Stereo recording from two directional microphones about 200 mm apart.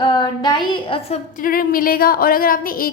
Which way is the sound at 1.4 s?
45° left (ahead or behind).